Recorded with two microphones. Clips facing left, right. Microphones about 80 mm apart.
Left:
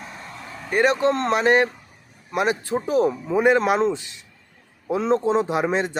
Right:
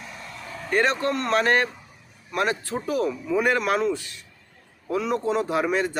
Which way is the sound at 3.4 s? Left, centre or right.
Left.